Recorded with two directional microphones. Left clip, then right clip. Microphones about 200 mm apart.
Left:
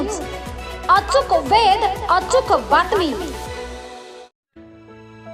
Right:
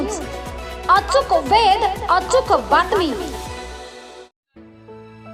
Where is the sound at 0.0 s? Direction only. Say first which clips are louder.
Even; centre (ahead or behind).